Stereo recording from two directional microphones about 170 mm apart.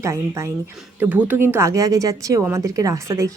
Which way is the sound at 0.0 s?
15° right (ahead or behind).